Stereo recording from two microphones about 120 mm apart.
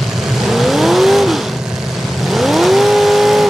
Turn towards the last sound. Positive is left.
turn(degrees=0)  # may be behind; listen again after turning